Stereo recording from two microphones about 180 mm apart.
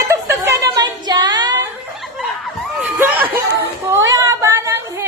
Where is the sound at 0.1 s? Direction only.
15° right (ahead or behind).